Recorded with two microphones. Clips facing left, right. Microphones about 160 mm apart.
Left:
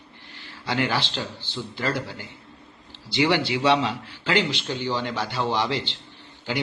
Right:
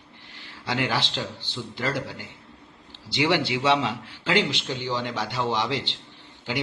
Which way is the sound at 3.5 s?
5° right (ahead or behind).